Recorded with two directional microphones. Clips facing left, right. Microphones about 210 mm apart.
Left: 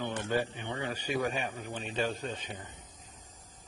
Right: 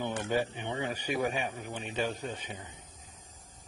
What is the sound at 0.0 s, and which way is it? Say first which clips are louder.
A man's voice: right 1 dB; 15° right (ahead or behind).